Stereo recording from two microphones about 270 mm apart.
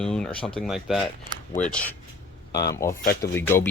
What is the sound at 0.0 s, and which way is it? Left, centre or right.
Speech, centre.